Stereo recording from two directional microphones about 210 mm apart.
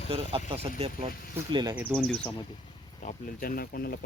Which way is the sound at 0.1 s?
25° right (ahead or behind).